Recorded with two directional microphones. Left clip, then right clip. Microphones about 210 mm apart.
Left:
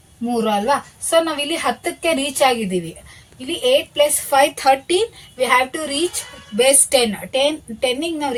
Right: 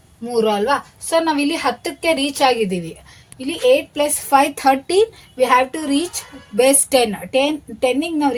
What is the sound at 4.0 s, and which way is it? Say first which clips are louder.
A woman's voice: even; 50° right (ahead or behind).